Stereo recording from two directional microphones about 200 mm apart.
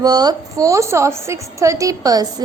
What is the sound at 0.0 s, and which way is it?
A woman's voice, 20° right (ahead or behind).